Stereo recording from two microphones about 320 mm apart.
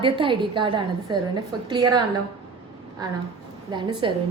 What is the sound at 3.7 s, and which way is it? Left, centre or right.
Speech, centre.